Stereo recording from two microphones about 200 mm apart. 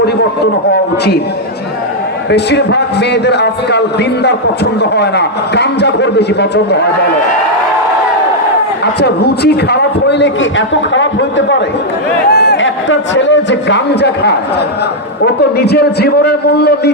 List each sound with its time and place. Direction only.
0.7 s a man's voice: 55° left (ahead or behind)
2.3 s a man's voice: 60° left (ahead or behind)
8.8 s a man's voice: 55° left (ahead or behind)
12.3 s a man's voice: 55° left (ahead or behind)